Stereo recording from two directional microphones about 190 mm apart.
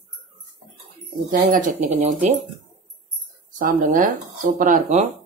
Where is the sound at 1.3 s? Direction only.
45° right (ahead or behind).